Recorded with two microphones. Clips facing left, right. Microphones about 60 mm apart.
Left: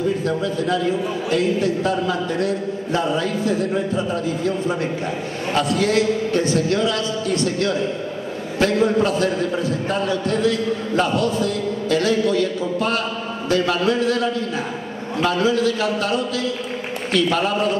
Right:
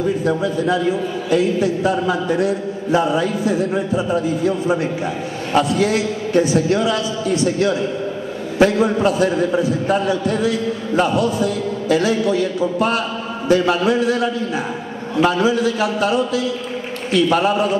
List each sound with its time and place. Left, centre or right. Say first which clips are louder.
0.2 s a man's voice: right 3 dB; centre